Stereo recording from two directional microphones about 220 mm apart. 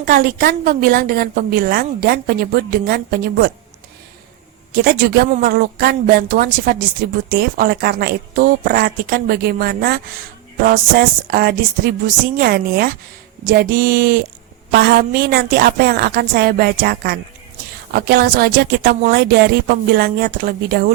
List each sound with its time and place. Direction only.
0.0 s a woman's voice: 40° right (ahead or behind)
4.7 s a woman's voice: 45° right (ahead or behind)